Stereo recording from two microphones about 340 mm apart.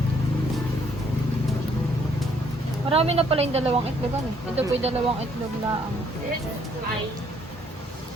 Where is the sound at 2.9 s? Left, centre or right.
Centre.